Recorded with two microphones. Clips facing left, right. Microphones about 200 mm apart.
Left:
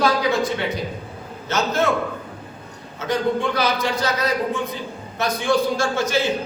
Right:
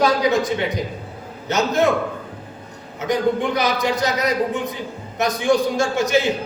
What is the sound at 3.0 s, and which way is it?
A man's voice, 15° right (ahead or behind).